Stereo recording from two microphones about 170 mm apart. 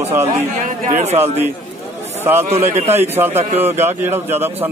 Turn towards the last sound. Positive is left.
turn(degrees=-10)  # may be behind; listen again after turning